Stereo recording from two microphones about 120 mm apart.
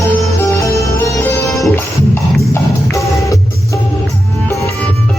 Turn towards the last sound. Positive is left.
turn(degrees=25)  # may be behind; listen again after turning